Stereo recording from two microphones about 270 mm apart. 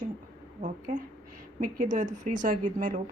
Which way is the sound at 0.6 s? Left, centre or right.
Right.